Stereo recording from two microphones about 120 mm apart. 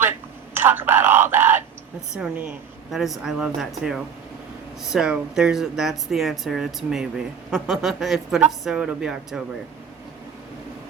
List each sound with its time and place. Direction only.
0.5 s speech: 20° right (ahead or behind)